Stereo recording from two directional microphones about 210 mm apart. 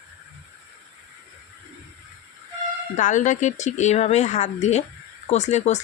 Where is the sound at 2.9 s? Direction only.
35° left (ahead or behind).